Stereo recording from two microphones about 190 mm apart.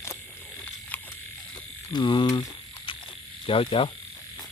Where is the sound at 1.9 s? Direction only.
25° left (ahead or behind).